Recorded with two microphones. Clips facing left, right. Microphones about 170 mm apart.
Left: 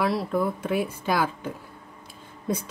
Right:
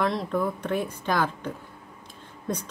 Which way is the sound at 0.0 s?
5° left (ahead or behind).